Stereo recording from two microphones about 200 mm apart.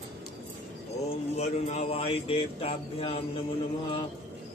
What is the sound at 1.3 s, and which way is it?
Speech, 30° left (ahead or behind).